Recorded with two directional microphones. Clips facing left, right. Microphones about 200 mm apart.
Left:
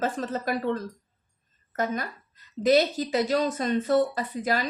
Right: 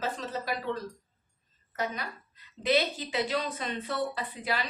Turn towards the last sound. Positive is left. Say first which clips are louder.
# left 6 dB
turn(degrees=45)  # may be behind; listen again after turning